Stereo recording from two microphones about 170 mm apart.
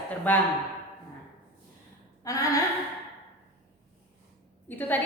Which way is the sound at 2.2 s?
20° left (ahead or behind).